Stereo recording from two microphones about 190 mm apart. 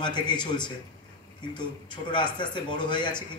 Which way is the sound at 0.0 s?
25° left (ahead or behind).